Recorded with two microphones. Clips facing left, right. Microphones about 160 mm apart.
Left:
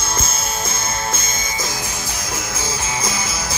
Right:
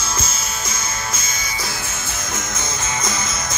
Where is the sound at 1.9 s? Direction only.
10° left (ahead or behind).